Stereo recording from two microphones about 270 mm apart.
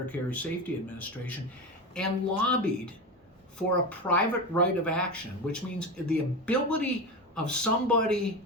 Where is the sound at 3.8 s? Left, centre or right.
Centre.